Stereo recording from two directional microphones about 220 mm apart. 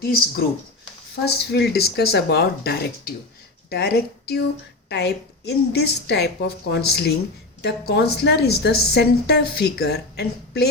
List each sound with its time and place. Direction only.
0.0 s a woman's voice: 45° left (ahead or behind)